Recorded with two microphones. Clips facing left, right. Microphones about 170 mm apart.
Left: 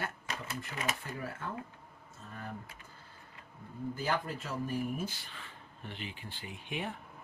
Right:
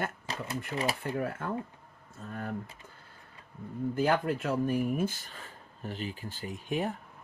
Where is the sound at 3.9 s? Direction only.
60° right (ahead or behind); by 6.9 s 40° right (ahead or behind).